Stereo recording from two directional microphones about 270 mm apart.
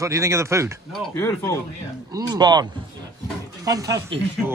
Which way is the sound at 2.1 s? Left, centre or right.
Centre.